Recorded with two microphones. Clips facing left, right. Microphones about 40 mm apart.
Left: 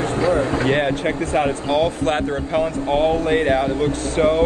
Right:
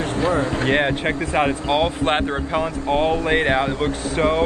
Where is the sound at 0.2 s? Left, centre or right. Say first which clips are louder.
Left 2 dB; right.